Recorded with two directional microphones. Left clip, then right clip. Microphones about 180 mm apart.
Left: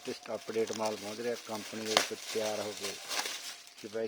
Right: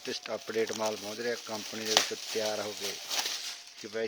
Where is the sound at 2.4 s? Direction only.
15° right (ahead or behind).